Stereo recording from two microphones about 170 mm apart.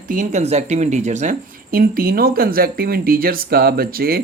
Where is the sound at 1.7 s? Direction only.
60° right (ahead or behind).